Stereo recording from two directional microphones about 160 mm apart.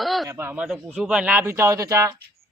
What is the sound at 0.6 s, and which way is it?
Speech, centre (ahead or behind).